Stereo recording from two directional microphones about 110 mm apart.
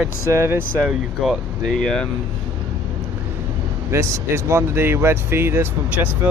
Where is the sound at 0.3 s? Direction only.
25° right (ahead or behind).